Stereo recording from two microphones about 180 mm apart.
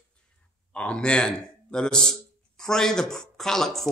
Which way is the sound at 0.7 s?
5° left (ahead or behind).